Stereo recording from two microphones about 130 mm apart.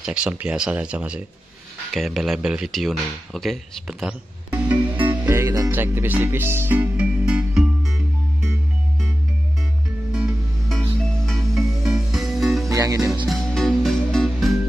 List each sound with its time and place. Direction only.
0.0 s speech: 5° right (ahead or behind)
5.1 s music: 15° right (ahead or behind)
10.1 s music: 5° right (ahead or behind)
12.6 s music: 25° right (ahead or behind)
13.5 s music: 5° left (ahead or behind)